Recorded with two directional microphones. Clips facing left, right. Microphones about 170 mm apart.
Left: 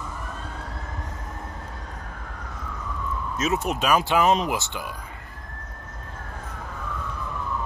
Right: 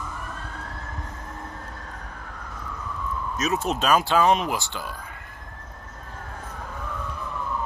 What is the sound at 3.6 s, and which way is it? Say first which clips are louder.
Speech: right 2 dB; 10° left (ahead or behind).